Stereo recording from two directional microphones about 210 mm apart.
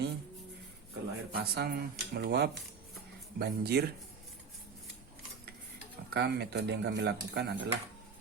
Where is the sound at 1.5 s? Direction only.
50° right (ahead or behind).